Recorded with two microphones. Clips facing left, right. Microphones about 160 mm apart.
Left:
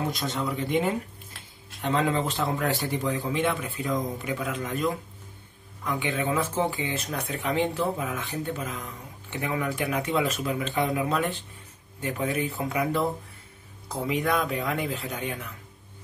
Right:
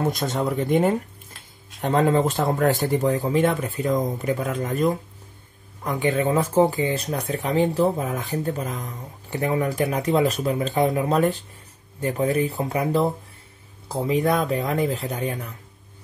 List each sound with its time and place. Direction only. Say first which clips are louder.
0.0 s speech: right 5 dB; 45° right (ahead or behind)